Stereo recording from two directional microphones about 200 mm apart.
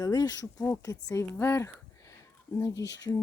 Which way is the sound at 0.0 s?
20° left (ahead or behind).